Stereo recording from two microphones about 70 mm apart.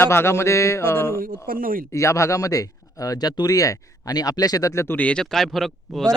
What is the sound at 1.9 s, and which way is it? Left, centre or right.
Speech, left.